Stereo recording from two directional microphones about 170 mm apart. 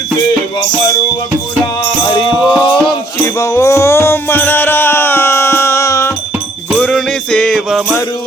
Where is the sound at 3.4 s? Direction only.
15° left (ahead or behind).